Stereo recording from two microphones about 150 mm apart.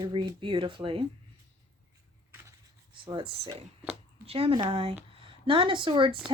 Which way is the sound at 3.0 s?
35° right (ahead or behind).